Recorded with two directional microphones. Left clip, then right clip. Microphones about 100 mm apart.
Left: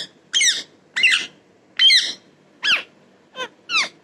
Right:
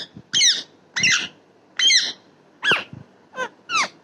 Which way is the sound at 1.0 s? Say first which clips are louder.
Left 2 dB; 55° right (ahead or behind).